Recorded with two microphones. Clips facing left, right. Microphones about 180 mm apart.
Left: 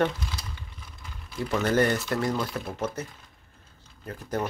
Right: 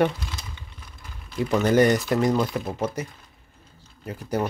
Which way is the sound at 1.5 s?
15° right (ahead or behind).